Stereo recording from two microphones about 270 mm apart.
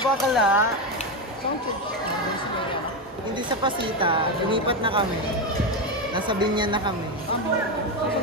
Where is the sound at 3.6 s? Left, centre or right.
Centre.